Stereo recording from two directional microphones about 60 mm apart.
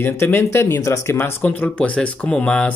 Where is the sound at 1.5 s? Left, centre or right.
Left.